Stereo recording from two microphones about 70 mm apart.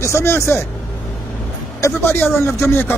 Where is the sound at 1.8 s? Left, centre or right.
Left.